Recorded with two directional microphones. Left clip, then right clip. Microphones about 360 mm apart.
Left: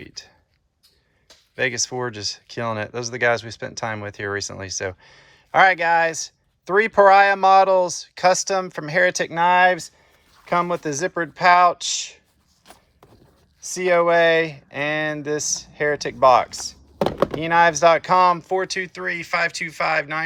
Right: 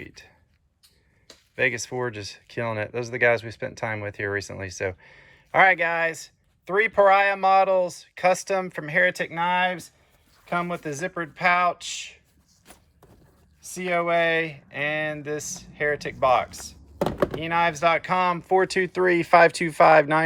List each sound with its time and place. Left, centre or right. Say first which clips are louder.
0.0 s a sound: left 4 dB; centre
1.5 s speech: left 2 dB; centre
13.6 s speech: left 7 dB; centre